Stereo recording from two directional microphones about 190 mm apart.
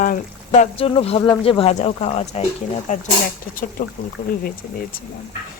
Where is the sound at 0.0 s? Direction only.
40° left (ahead or behind).